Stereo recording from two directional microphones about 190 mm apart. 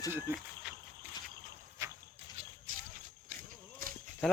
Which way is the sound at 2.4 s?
45° right (ahead or behind).